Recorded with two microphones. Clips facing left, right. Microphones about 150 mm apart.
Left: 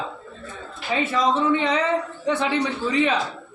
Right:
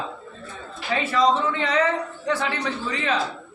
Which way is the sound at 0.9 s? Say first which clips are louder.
Right 1 dB; 15° left (ahead or behind).